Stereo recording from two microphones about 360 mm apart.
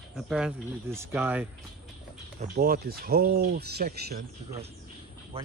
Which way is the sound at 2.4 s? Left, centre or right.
Right.